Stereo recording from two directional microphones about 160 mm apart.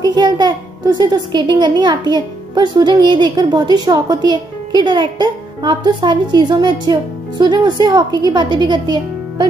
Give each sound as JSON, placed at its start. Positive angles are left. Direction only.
{"t": 0.0, "sound": "a child's voice", "side_deg": -25}